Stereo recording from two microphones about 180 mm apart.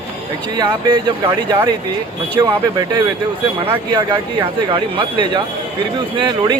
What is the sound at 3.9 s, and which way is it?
Speech, 25° right (ahead or behind).